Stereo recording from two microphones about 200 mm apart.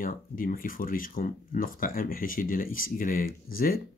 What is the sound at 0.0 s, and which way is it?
Speech, 45° left (ahead or behind).